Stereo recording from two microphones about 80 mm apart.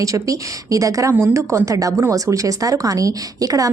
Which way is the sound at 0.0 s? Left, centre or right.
Right.